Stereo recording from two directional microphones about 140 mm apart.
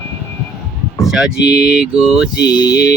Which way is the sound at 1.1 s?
5° right (ahead or behind).